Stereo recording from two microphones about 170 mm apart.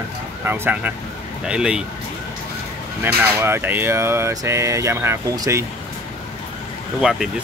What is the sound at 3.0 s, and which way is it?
Speech, 15° right (ahead or behind).